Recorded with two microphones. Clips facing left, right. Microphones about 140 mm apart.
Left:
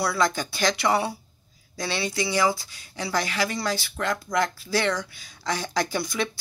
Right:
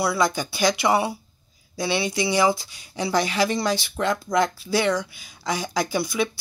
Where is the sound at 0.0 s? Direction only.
10° right (ahead or behind).